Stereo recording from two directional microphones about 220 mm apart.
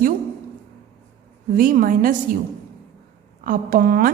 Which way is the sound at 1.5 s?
40° right (ahead or behind).